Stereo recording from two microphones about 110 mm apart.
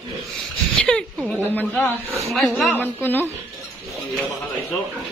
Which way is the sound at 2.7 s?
15° left (ahead or behind).